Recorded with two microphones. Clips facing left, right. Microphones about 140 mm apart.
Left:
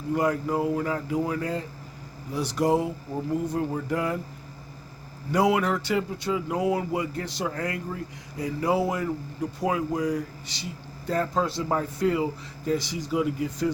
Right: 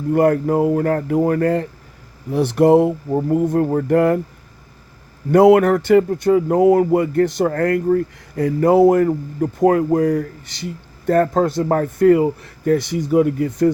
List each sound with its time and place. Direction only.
0.1 s speech: 55° right (ahead or behind)
5.3 s speech: 55° right (ahead or behind)